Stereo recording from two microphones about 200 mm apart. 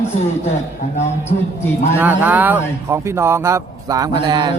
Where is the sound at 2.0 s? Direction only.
10° right (ahead or behind).